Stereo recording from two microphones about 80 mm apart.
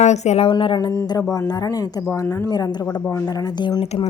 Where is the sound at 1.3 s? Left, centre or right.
Left.